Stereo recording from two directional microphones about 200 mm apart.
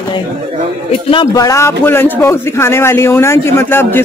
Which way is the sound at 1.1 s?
20° left (ahead or behind).